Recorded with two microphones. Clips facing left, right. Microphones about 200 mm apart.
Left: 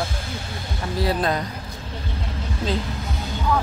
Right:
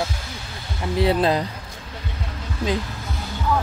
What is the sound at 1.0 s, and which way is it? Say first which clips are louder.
Speech: right 4 dB; 25° right (ahead or behind).